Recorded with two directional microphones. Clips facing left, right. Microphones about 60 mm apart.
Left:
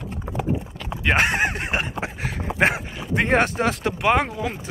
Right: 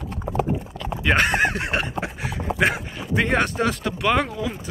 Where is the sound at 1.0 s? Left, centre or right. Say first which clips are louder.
Right 1 dB; left.